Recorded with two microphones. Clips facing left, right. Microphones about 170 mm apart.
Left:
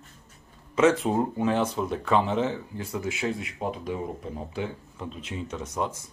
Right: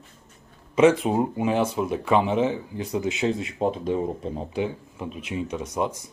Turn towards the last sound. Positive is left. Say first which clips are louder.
# right 4 dB
turn(degrees=-15)  # may be behind; listen again after turning